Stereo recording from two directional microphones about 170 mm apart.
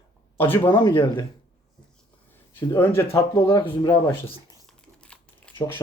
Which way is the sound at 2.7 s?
15° left (ahead or behind).